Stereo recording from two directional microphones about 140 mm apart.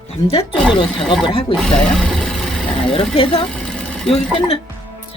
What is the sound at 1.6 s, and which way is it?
Speech, 5° left (ahead or behind).